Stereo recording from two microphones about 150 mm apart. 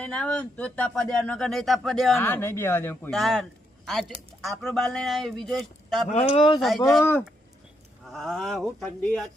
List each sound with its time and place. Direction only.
0.0 s speech: 5° left (ahead or behind)
2.1 s speech: 15° left (ahead or behind)
3.1 s speech: centre (ahead or behind)
6.3 s speech: 40° left (ahead or behind)
6.6 s speech: centre (ahead or behind)
7.0 s speech: 15° left (ahead or behind)
8.1 s speech: centre (ahead or behind)